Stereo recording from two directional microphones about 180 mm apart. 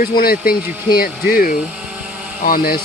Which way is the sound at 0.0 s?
55° left (ahead or behind).